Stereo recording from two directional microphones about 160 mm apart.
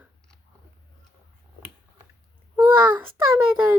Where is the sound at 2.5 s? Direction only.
30° right (ahead or behind).